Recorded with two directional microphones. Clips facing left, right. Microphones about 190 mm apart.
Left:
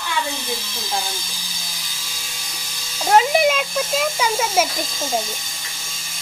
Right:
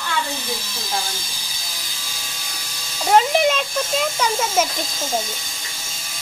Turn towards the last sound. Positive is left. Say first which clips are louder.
# left 1 dB
turn(degrees=5)  # may be behind; listen again after turning